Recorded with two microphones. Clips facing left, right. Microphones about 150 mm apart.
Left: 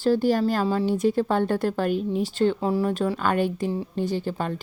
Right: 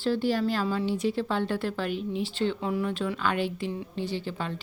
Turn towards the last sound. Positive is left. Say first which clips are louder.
# left 5 dB
turn(degrees=45)  # may be behind; listen again after turning